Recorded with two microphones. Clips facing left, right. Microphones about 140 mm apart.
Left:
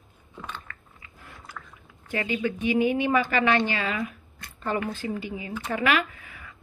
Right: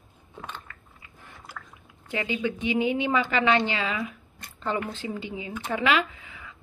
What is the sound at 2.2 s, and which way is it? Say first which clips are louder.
A woman's voice: left 1 dB; 15° right (ahead or behind).